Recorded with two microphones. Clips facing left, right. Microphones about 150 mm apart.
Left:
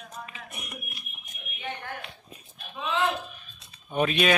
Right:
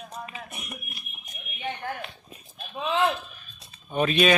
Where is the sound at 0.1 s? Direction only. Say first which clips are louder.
Right 3 dB; 30° right (ahead or behind).